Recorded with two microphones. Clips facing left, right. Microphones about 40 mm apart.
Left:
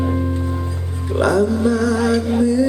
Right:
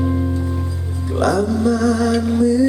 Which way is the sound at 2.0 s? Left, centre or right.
Left.